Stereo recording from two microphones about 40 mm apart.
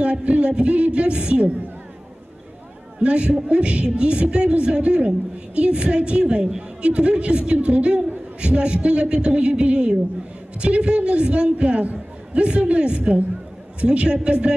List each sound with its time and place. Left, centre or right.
0.0 s speech: right
3.0 s speech: right
6.8 s speech: right